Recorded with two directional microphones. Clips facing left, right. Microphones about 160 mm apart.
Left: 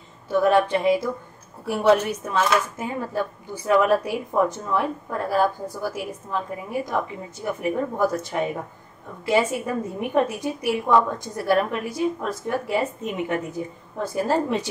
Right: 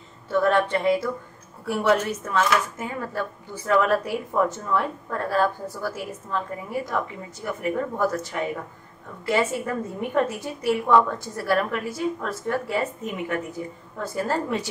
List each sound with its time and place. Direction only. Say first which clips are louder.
0.3 s speech: left 2 dB; 10° left (ahead or behind)